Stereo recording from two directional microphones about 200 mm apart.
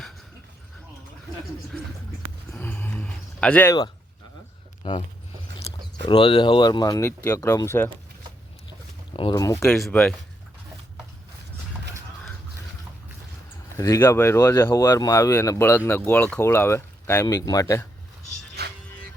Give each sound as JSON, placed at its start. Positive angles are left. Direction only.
{"t": 2.5, "sound": "a sound", "side_deg": 10}
{"t": 4.8, "sound": "speech", "side_deg": 25}
{"t": 6.1, "sound": "speech", "side_deg": 25}
{"t": 9.1, "sound": "speech", "side_deg": 20}
{"t": 13.7, "sound": "speech", "side_deg": 15}
{"t": 18.6, "sound": "music", "side_deg": -55}